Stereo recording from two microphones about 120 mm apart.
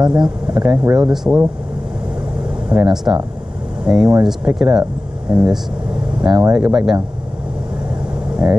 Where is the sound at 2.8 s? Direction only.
5° right (ahead or behind).